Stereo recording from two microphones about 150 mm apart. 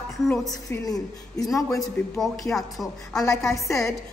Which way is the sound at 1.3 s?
25° left (ahead or behind).